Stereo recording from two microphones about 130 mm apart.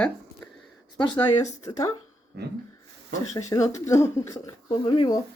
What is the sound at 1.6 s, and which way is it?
Speech, 25° left (ahead or behind).